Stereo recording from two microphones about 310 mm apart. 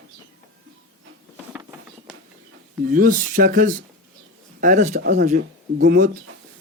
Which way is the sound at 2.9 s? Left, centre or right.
Right.